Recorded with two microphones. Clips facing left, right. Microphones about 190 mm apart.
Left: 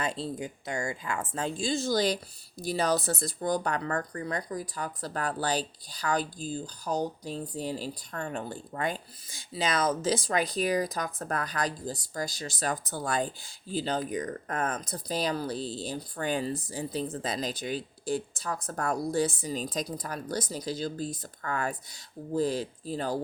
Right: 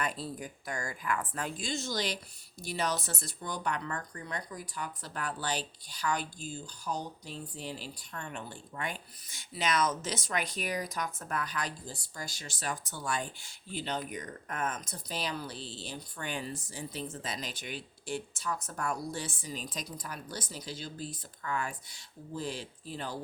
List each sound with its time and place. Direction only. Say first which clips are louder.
0.0 s speech: left 4 dB; 25° left (ahead or behind)